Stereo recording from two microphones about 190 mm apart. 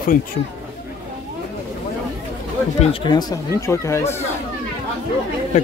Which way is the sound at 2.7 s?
25° left (ahead or behind).